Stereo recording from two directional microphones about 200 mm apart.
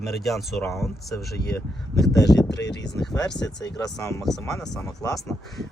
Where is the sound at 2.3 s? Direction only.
Centre (ahead or behind).